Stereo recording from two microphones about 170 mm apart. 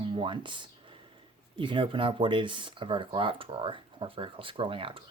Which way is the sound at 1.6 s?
30° right (ahead or behind).